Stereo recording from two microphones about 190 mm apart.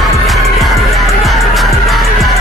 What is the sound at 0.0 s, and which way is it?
Music, centre (ahead or behind).